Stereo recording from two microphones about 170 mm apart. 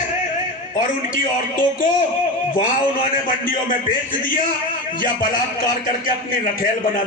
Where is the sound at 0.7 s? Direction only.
50° left (ahead or behind).